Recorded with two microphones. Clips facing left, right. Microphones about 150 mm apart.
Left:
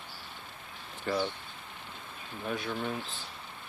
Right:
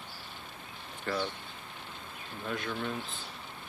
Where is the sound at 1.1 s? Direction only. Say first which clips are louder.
Left 2 dB; 15° left (ahead or behind).